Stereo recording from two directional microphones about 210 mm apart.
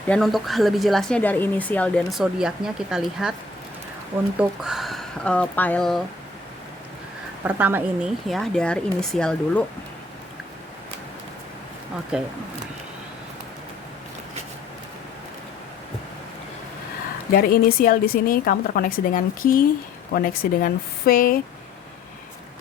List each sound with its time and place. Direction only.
0.1 s speech: centre (ahead or behind)
4.4 s speech: centre (ahead or behind)
7.4 s speech: 10° right (ahead or behind)
12.1 s speech: 5° right (ahead or behind)
17.3 s speech: 45° left (ahead or behind)